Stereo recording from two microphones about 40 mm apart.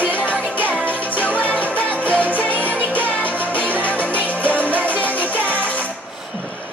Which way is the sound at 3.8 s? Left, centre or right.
Left.